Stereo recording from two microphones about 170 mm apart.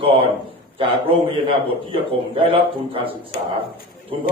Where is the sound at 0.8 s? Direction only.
30° right (ahead or behind).